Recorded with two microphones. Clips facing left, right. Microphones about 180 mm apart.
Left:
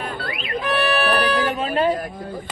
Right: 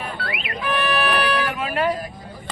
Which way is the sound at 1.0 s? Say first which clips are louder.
Left 2 dB; 25° left (ahead or behind).